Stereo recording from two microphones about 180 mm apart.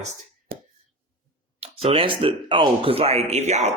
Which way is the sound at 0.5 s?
60° right (ahead or behind).